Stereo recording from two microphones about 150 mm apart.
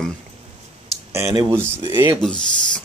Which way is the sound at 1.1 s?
20° right (ahead or behind).